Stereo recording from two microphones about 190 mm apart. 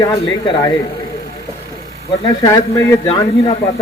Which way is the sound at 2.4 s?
15° left (ahead or behind).